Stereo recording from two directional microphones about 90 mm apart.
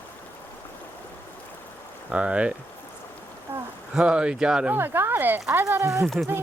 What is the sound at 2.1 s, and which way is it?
Speech, 10° right (ahead or behind).